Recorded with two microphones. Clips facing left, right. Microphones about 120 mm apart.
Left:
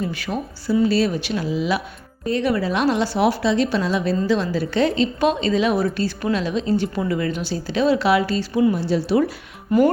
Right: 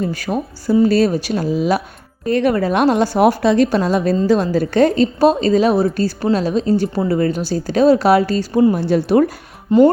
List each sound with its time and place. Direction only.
0.0 s a woman's voice: 40° right (ahead or behind)
9.7 s speech: 25° right (ahead or behind)